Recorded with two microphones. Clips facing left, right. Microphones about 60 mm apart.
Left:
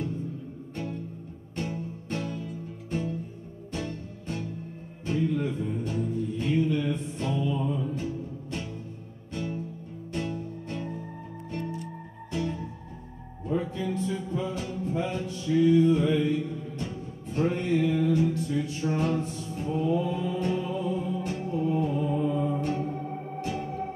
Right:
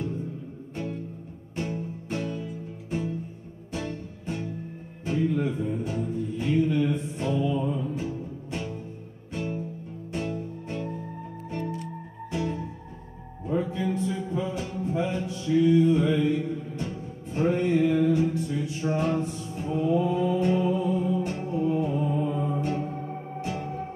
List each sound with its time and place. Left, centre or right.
1.6 s music: centre
10.3 s music: centre
12.3 s music: centre
16.0 s music: centre
20.2 s music: right